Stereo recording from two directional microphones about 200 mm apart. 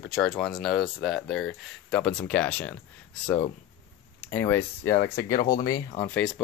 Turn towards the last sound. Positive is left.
turn(degrees=20)  # may be behind; listen again after turning